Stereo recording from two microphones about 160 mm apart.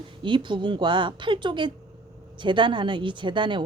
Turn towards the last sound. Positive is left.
turn(degrees=-30)  # may be behind; listen again after turning